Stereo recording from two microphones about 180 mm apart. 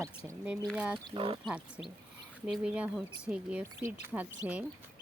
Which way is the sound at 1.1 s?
30° right (ahead or behind).